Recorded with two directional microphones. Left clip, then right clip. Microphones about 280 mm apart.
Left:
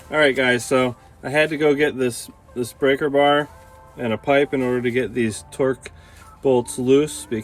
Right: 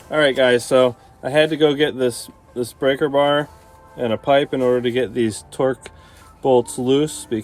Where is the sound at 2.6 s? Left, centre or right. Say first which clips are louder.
Right 1 dB; right.